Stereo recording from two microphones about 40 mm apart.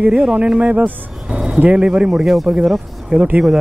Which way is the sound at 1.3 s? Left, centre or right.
Centre.